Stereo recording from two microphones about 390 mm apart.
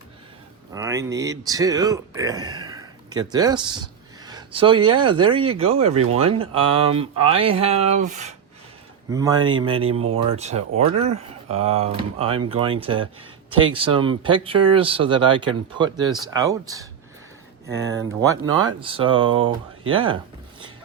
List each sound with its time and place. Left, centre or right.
0.7 s speech: centre
18.3 s speech: centre